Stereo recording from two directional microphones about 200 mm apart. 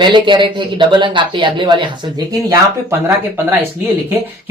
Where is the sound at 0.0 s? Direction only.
25° right (ahead or behind).